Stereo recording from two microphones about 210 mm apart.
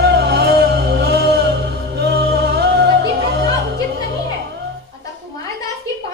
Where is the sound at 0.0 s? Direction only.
50° right (ahead or behind).